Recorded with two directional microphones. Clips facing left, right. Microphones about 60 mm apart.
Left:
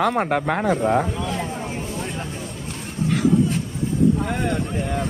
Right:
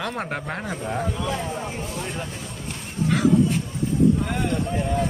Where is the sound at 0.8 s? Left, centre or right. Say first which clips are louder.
Left 9 dB; left.